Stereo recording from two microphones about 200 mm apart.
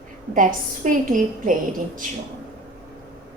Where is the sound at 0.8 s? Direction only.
40° right (ahead or behind).